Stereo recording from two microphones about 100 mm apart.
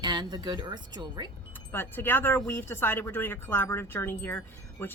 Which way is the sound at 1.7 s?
20° left (ahead or behind).